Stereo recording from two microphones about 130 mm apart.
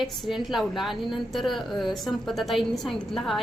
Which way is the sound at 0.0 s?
Centre (ahead or behind).